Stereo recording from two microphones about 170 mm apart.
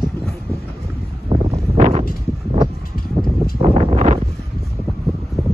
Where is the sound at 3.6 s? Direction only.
35° right (ahead or behind).